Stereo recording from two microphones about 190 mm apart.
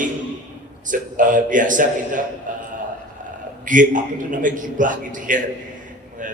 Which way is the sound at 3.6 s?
45° right (ahead or behind).